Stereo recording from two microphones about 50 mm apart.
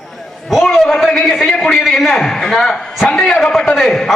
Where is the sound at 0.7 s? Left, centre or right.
Centre.